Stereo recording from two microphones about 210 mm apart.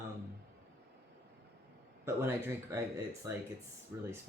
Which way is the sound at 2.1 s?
10° right (ahead or behind).